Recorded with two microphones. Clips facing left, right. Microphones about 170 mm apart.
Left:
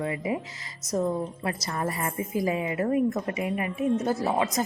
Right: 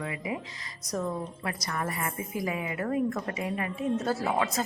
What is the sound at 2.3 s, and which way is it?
A woman's voice, 30° left (ahead or behind).